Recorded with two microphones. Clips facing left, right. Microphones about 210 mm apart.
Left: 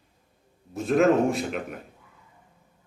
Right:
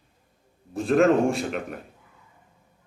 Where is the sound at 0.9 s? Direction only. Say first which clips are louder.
Right 1 dB; centre (ahead or behind).